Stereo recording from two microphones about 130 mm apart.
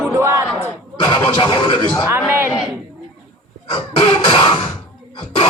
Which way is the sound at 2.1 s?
15° right (ahead or behind).